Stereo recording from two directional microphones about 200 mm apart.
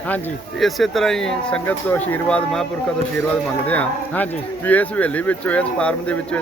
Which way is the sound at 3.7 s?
10° left (ahead or behind).